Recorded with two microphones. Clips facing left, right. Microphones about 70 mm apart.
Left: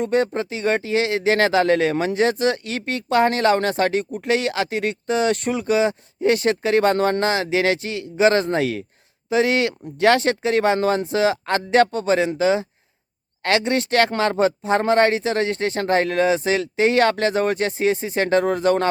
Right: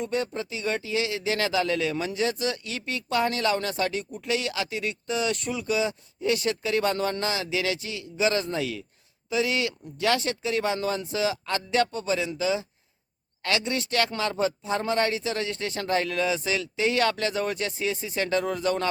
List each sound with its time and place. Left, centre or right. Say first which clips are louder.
0.0 s speech: left 8 dB; left